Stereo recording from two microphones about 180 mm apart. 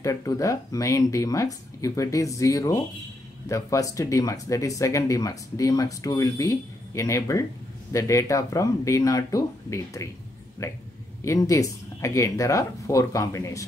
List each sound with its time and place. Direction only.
0.0 s speech: 20° left (ahead or behind)